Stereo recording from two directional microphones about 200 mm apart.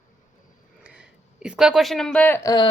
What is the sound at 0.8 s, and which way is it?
Speech, 5° right (ahead or behind).